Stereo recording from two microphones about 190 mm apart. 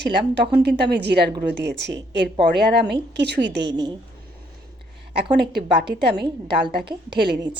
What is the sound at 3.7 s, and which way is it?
Speech, 20° right (ahead or behind).